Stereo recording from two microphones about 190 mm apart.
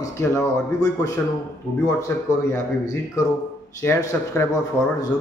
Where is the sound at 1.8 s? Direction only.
15° left (ahead or behind).